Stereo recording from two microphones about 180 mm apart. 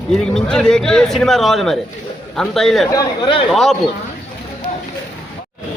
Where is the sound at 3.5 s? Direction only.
Centre (ahead or behind).